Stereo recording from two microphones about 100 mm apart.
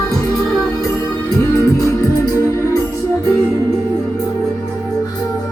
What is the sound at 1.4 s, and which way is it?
Music, 30° left (ahead or behind).